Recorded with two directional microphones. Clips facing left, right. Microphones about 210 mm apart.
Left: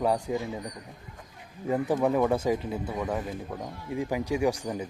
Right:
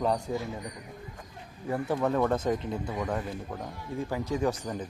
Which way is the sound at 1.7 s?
15° left (ahead or behind).